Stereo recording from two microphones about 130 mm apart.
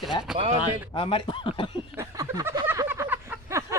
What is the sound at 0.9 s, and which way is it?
Speech, 45° left (ahead or behind).